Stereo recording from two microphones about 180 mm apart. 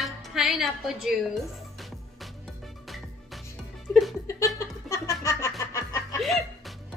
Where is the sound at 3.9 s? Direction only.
15° left (ahead or behind).